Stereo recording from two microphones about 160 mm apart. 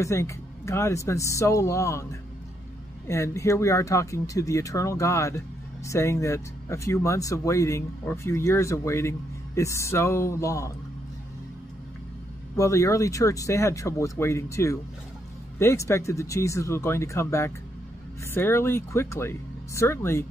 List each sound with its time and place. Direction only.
0.0 s speech: 20° left (ahead or behind)
12.5 s speech: 20° left (ahead or behind)